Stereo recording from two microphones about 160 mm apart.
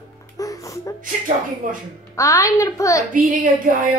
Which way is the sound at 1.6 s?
60° right (ahead or behind).